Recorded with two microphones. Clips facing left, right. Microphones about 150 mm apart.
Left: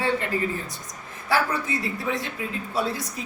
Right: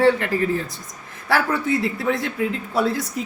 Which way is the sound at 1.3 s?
70° right (ahead or behind).